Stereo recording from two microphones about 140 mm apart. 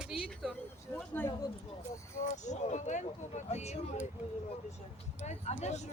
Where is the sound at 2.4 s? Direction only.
60° left (ahead or behind).